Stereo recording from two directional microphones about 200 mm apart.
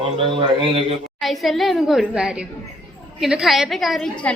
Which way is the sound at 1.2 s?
Centre (ahead or behind).